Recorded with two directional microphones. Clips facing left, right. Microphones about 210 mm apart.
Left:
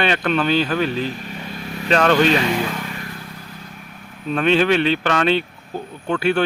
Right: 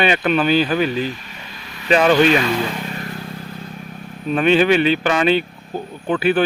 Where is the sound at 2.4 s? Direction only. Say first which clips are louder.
Right 1 dB; 15° left (ahead or behind).